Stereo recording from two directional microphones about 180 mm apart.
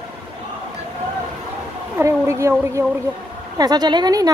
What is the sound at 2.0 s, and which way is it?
A woman's voice, 15° right (ahead or behind).